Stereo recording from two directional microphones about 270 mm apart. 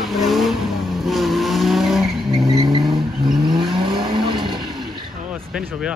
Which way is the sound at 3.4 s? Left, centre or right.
Centre.